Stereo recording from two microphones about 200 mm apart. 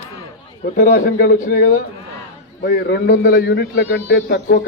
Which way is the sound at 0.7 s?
45° left (ahead or behind).